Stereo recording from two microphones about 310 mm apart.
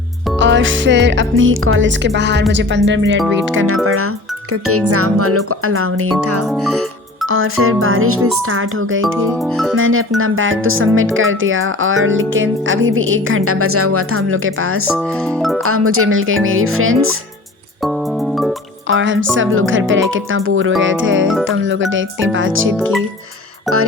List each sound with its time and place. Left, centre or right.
0.3 s speech: right
14.9 s speech: centre
15.6 s speech: right
18.9 s speech: right